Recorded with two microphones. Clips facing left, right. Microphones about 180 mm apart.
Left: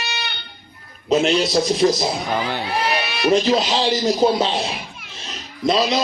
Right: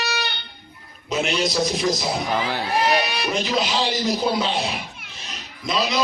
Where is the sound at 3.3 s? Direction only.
35° left (ahead or behind).